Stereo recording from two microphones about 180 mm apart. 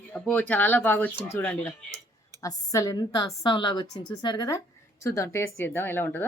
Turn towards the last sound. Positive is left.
turn(degrees=10)  # may be behind; listen again after turning